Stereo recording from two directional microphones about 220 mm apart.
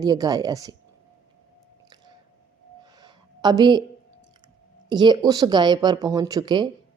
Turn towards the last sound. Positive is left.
turn(degrees=-20)  # may be behind; listen again after turning